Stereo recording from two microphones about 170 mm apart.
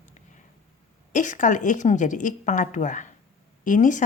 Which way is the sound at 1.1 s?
45° left (ahead or behind).